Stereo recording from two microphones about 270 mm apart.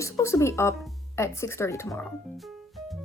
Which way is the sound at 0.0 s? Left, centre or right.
Centre.